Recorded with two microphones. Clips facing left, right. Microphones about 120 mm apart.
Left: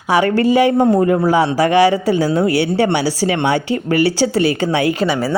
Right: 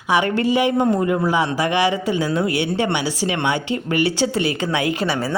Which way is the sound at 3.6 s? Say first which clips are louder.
Left 4 dB; 25° right (ahead or behind).